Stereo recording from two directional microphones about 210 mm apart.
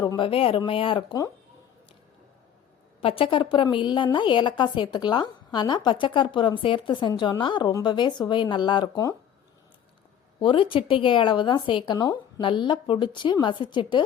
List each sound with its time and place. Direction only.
0.0 s a woman's voice: 20° left (ahead or behind)
3.0 s a woman's voice: 25° left (ahead or behind)
10.4 s a woman's voice: 25° left (ahead or behind)